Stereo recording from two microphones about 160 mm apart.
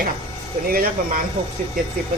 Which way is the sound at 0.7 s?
65° right (ahead or behind).